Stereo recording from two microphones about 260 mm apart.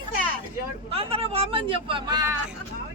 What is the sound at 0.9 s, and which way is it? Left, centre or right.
Speech, right.